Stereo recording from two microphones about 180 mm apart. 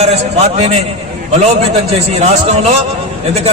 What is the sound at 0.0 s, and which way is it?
Speech, 35° right (ahead or behind).